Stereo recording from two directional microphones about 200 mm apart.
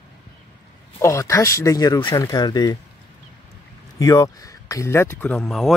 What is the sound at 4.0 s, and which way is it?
Speech, 15° left (ahead or behind).